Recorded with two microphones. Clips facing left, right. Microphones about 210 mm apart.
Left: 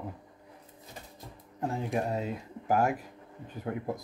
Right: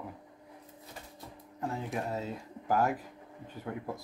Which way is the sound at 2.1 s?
15° left (ahead or behind).